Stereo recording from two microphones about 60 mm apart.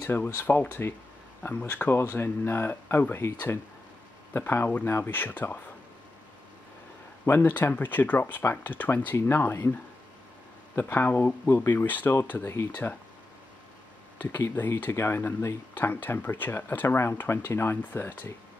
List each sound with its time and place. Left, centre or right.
0.4 s speech: left
7.4 s speech: left
10.8 s speech: left
14.1 s speech: left